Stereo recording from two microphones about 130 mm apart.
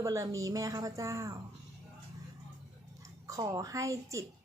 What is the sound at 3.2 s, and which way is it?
Speech, 25° right (ahead or behind).